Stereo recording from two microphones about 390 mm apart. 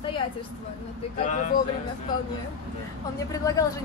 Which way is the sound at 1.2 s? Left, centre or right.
Centre.